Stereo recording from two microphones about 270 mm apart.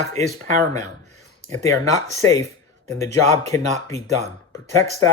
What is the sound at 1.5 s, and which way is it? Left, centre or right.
Speech, centre.